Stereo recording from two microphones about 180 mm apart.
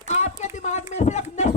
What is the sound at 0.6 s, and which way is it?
Speech, 40° left (ahead or behind).